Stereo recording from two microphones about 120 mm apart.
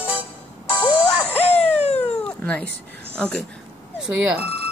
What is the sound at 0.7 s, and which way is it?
Music, 40° left (ahead or behind).